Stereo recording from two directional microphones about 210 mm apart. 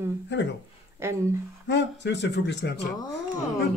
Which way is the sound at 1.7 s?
55° left (ahead or behind).